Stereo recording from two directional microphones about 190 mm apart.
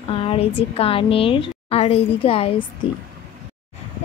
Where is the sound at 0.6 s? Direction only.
30° left (ahead or behind).